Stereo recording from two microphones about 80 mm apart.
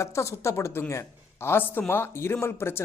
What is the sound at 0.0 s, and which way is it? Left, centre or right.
A woman's voice, left.